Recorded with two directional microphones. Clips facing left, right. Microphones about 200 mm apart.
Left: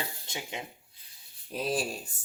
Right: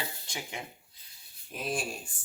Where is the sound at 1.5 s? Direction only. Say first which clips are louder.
Left 3 dB; 35° left (ahead or behind).